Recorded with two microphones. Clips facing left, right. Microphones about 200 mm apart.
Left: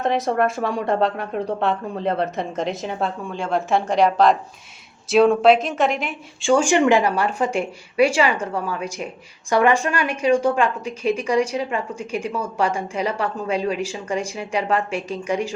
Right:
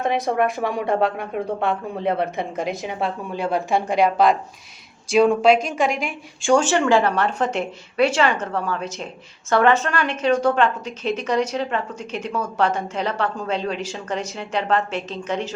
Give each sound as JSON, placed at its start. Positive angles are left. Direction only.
{"t": 0.3, "sound": "a woman's voice", "side_deg": -15}
{"t": 1.1, "sound": "a woman's voice", "side_deg": -5}